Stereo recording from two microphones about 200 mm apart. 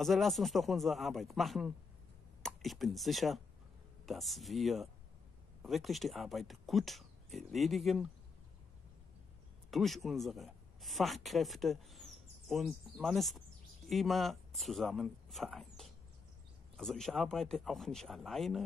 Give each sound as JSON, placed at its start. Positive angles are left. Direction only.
{"t": 0.0, "sound": "speech", "side_deg": 0}
{"t": 9.7, "sound": "speech", "side_deg": 0}